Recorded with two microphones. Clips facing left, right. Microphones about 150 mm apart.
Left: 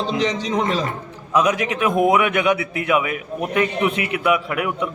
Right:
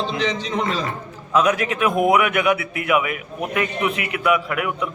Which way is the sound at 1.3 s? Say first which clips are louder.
Even; 15° left (ahead or behind).